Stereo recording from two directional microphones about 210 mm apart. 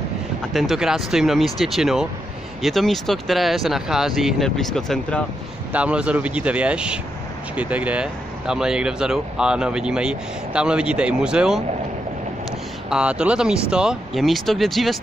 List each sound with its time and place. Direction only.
0.5 s speech: centre (ahead or behind)
12.9 s speech: 5° right (ahead or behind)